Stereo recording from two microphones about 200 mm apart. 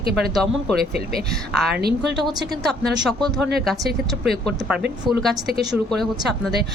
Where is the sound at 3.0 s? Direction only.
Centre (ahead or behind).